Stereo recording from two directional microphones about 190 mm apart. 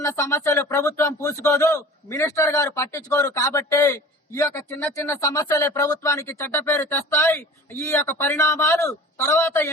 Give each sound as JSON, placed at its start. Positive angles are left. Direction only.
{"t": 0.0, "sound": "speech", "side_deg": 15}